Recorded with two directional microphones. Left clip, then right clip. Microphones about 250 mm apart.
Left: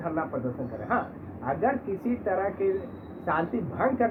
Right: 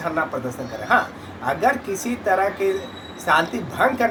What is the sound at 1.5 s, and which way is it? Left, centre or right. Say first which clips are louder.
Speech: right 7 dB; right.